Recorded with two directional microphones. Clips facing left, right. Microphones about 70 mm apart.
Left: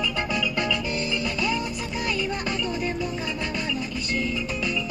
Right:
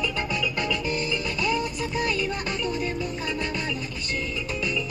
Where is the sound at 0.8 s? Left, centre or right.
Right.